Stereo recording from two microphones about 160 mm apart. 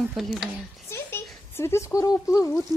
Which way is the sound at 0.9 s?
15° left (ahead or behind).